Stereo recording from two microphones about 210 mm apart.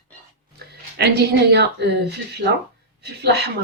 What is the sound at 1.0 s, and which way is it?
Speech, 50° right (ahead or behind).